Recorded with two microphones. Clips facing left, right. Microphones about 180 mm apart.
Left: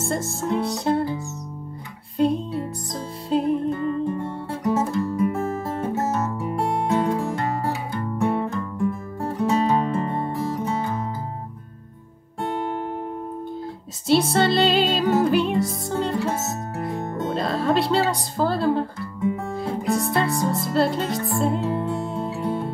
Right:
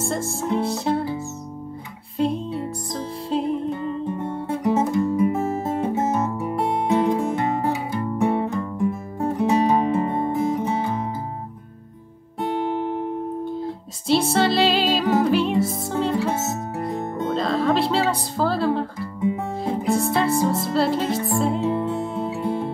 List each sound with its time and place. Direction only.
0.0 s music: centre (ahead or behind)
2.1 s music: centre (ahead or behind)
3.7 s music: 20° right (ahead or behind)
14.0 s music: centre (ahead or behind)